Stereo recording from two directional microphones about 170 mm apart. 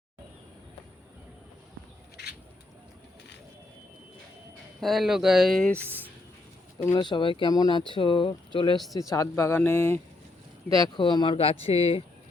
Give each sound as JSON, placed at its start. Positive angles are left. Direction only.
{"t": 4.8, "sound": "speech", "side_deg": 0}
{"t": 5.8, "sound": "speech", "side_deg": -10}
{"t": 6.9, "sound": "speech", "side_deg": 25}
{"t": 9.0, "sound": "speech", "side_deg": 20}
{"t": 10.8, "sound": "speech", "side_deg": 25}